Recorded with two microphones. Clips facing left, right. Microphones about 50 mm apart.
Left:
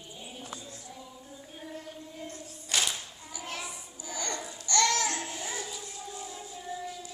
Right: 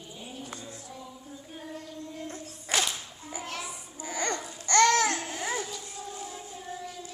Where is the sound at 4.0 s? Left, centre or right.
Right.